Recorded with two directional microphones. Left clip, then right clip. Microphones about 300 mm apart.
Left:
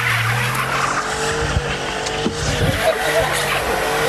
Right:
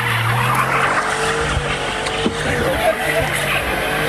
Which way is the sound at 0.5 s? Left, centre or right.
Right.